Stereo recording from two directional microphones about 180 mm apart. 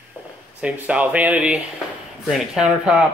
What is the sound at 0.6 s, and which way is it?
A man's voice, 5° right (ahead or behind).